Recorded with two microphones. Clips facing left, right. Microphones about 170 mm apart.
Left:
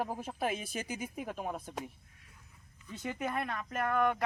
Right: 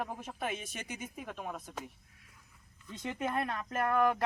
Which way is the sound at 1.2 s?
5° left (ahead or behind).